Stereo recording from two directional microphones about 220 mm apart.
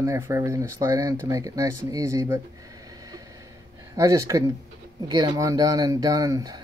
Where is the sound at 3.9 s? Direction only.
15° right (ahead or behind).